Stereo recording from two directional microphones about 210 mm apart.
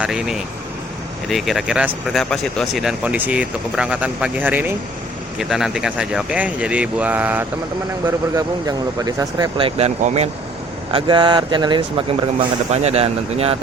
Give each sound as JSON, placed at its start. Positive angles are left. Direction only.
{"t": 0.0, "sound": "speech", "side_deg": 0}